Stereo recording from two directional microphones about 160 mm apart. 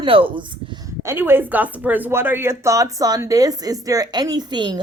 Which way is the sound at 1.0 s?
15° right (ahead or behind).